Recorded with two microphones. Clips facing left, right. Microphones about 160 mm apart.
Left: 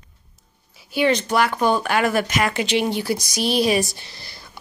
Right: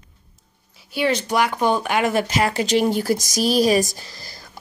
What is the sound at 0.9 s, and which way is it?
Speech, 5° right (ahead or behind).